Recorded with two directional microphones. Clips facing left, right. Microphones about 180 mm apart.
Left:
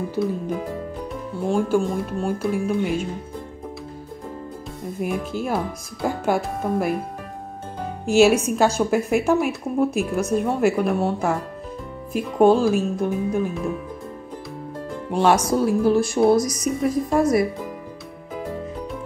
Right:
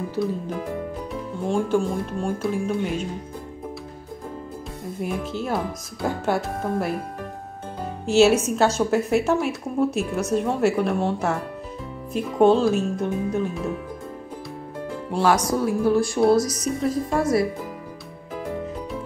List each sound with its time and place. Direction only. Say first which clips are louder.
1.5 s speech: left 1 dB; 5° left (ahead or behind)
5.0 s speech: left 2 dB; 10° left (ahead or behind)
8.1 s speech: left 1 dB; 10° left (ahead or behind)
15.1 s a woman's voice: left 2 dB; 25° left (ahead or behind)